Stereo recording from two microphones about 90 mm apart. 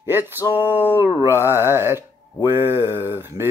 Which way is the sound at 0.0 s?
25° right (ahead or behind).